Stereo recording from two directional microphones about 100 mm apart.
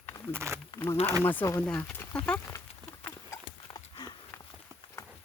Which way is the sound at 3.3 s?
25° left (ahead or behind).